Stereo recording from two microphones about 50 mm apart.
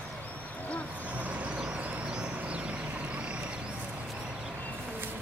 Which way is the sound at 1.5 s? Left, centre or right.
Centre.